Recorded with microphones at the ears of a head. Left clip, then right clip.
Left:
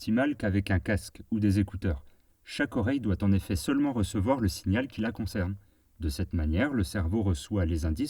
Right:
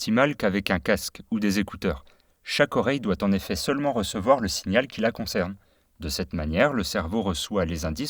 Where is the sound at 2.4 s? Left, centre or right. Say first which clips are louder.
Right 8 dB; right.